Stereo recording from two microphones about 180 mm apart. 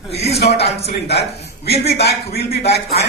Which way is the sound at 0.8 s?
65° left (ahead or behind).